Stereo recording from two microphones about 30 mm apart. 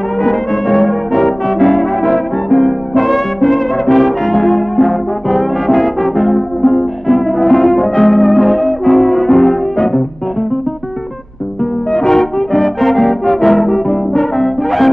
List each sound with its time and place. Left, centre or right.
0.2 s brass instrument: centre
11.9 s music: centre
12.4 s brass instrument: centre